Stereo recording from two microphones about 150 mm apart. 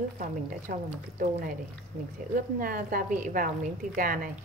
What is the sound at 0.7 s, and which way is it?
Speech, 75° right (ahead or behind).